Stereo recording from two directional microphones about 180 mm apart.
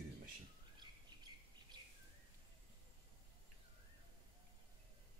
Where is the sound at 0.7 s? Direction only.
25° right (ahead or behind).